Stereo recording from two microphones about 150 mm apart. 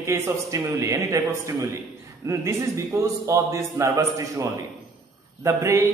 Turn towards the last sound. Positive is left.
turn(degrees=-20)  # may be behind; listen again after turning